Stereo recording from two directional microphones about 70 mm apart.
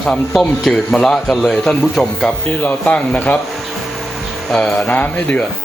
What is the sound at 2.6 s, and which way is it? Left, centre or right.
Speech, left.